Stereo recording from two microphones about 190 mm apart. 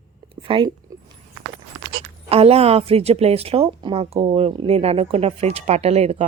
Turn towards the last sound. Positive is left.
turn(degrees=-30)  # may be behind; listen again after turning